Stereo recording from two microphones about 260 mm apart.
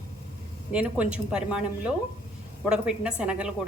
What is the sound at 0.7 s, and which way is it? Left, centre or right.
Speech, centre.